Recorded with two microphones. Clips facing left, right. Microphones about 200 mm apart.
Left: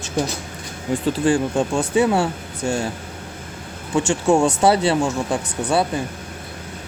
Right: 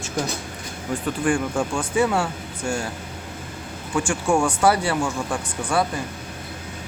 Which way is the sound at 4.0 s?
25° left (ahead or behind).